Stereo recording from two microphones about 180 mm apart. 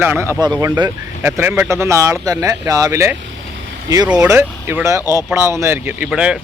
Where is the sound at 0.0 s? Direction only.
10° right (ahead or behind).